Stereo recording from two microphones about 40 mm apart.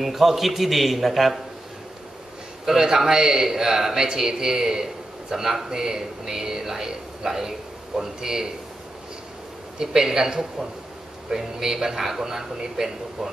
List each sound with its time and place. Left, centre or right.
0.0 s a man's voice: centre
2.6 s speech: centre
9.8 s speech: centre